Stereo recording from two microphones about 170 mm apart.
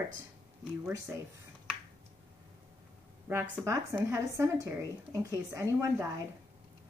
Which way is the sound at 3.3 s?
15° right (ahead or behind).